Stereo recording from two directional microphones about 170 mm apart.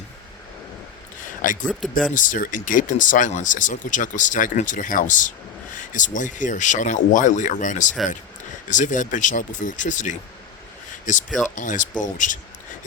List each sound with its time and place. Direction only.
1.4 s speech: 50° left (ahead or behind)
1.8 s speech: centre (ahead or behind)
2.1 s speech: 50° left (ahead or behind)